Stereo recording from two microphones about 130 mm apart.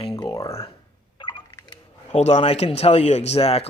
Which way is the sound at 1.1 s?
35° left (ahead or behind).